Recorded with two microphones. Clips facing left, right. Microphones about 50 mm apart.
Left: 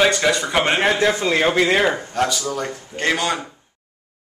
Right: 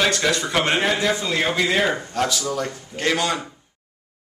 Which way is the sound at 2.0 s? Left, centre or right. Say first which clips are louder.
Left 2 dB; centre.